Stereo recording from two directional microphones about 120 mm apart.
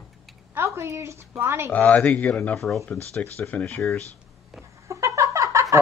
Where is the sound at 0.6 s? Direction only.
20° right (ahead or behind).